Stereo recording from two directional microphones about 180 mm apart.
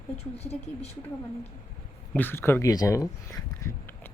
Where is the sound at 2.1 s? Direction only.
10° left (ahead or behind).